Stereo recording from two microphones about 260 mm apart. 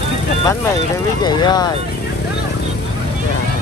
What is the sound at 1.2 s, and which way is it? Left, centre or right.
Vehicle, centre.